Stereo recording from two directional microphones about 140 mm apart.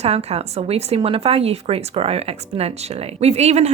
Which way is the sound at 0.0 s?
50° right (ahead or behind).